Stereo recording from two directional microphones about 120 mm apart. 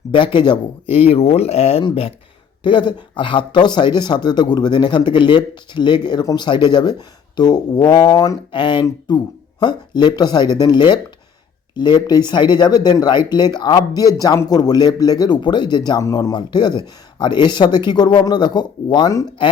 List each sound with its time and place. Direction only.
0.1 s speech: 45° left (ahead or behind)
2.6 s speech: 45° left (ahead or behind)
8.5 s speech: 40° left (ahead or behind)